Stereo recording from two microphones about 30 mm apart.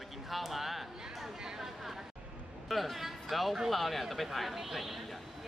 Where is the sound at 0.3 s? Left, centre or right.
Centre.